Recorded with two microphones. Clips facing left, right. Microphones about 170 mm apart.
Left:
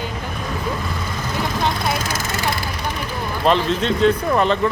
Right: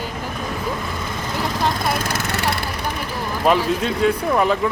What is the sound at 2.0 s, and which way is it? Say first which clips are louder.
Vehicle: right 1 dB; 60° right (ahead or behind).